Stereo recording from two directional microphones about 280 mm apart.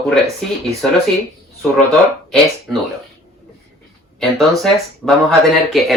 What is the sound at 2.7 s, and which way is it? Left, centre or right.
Speech, centre.